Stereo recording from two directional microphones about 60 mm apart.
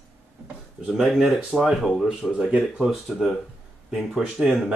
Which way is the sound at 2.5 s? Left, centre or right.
Centre.